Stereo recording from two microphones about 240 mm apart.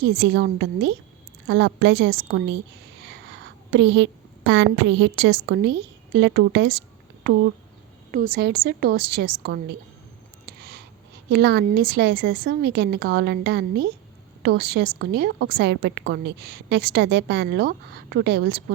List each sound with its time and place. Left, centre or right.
0.0 s a woman's voice: right
3.7 s a woman's voice: right
8.1 s a woman's voice: right
10.4 s a sound: right
11.3 s a woman's voice: right